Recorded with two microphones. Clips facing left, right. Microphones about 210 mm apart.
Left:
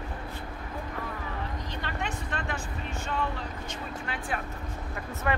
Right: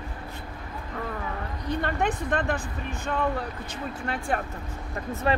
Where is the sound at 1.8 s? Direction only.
55° right (ahead or behind).